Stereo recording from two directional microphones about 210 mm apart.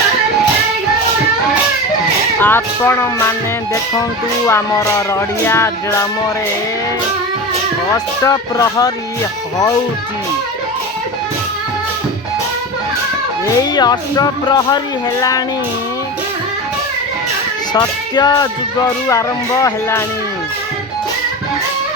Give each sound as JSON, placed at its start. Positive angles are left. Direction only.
{"t": 2.4, "sound": "music", "side_deg": 10}
{"t": 4.4, "sound": "music", "side_deg": 15}
{"t": 7.9, "sound": "music", "side_deg": 15}
{"t": 13.6, "sound": "speech", "side_deg": 20}
{"t": 17.7, "sound": "speech", "side_deg": 20}
{"t": 19.0, "sound": "music", "side_deg": 15}